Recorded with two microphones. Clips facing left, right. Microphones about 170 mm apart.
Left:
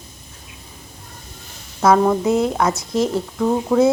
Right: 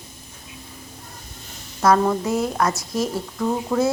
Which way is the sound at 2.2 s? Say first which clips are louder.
Left 4 dB; 20° left (ahead or behind).